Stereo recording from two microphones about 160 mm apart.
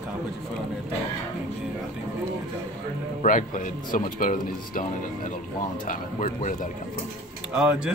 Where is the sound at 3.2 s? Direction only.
55° left (ahead or behind).